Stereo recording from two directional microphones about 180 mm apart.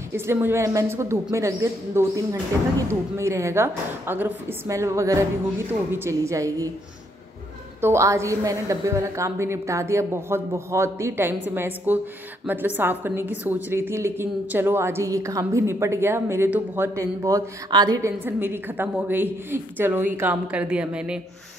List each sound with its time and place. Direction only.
0.1 s a woman's voice: 10° right (ahead or behind)
7.8 s a woman's voice: 15° right (ahead or behind)